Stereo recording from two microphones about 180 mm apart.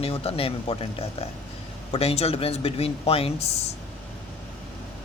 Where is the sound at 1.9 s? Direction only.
35° left (ahead or behind).